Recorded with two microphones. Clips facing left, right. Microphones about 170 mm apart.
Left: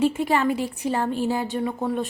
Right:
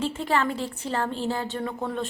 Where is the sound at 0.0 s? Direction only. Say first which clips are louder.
Left 5 dB; 15° left (ahead or behind).